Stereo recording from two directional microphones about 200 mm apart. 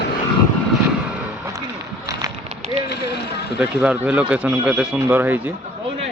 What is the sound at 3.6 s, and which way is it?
Speech, 5° right (ahead or behind).